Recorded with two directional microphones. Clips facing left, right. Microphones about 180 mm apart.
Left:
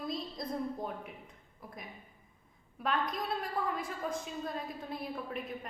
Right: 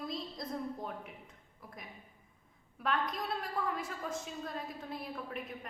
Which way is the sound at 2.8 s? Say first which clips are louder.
Left 1 dB; 20° left (ahead or behind).